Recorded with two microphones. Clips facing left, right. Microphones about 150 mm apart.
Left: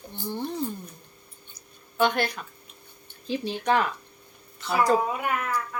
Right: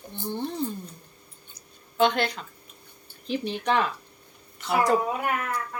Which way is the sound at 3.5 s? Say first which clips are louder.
Left 1 dB; 20° right (ahead or behind).